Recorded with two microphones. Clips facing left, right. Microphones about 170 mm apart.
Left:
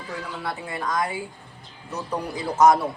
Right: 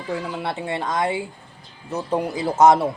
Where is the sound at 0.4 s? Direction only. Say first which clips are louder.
Right 4 dB; 25° right (ahead or behind).